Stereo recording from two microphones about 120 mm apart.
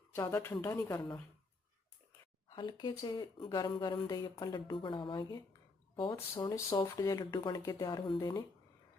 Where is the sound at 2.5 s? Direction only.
40° left (ahead or behind).